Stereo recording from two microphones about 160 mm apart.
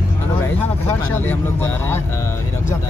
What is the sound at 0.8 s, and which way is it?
Speech, 15° left (ahead or behind).